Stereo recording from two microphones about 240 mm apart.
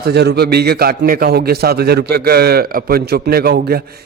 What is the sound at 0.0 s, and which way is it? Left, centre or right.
A man's voice, right.